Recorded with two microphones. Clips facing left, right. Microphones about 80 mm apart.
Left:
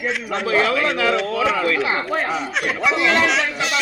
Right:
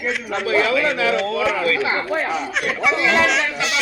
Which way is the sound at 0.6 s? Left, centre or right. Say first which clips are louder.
Right 1 dB; left.